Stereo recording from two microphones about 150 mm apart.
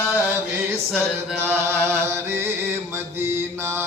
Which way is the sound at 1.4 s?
15° right (ahead or behind).